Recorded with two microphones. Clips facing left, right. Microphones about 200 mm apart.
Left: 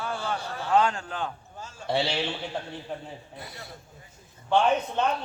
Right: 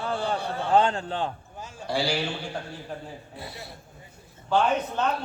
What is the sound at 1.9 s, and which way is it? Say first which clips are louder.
Speech: even; 25° left (ahead or behind).